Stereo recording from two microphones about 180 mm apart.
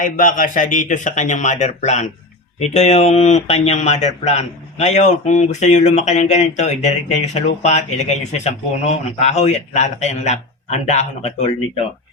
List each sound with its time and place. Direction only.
0.0 s a man's voice: 50° left (ahead or behind)